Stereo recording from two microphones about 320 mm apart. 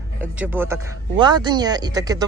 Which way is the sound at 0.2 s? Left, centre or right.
Centre.